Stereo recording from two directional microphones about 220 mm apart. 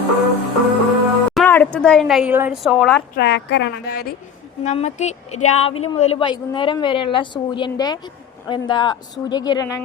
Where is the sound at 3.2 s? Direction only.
50° left (ahead or behind).